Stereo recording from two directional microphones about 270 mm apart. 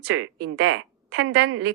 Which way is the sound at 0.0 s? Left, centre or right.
Right.